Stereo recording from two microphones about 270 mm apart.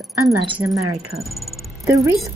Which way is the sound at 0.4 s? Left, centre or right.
Centre.